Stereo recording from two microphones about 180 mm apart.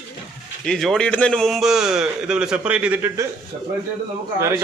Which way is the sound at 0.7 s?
Centre (ahead or behind).